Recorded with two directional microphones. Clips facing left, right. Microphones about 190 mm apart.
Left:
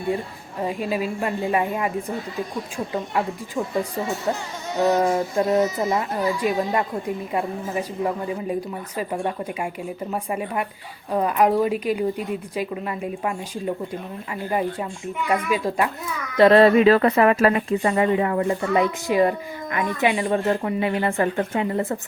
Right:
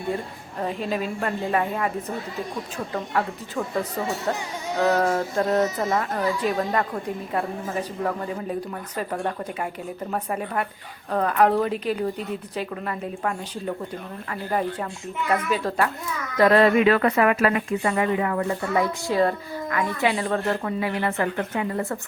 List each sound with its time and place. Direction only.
0.6 s a woman's voice: 10° left (ahead or behind)
15.3 s a woman's voice: 10° left (ahead or behind)
16.4 s speech: 25° left (ahead or behind)